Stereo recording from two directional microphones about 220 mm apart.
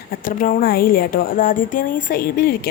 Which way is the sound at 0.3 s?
40° left (ahead or behind).